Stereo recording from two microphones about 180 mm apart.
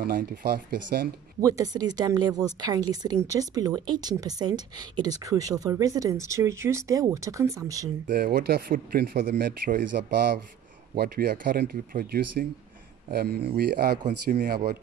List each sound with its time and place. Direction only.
0.0 s speech: 55° right (ahead or behind)
1.4 s a woman's voice: 20° right (ahead or behind)
8.1 s speech: 55° right (ahead or behind)
14.0 s speech: 45° right (ahead or behind)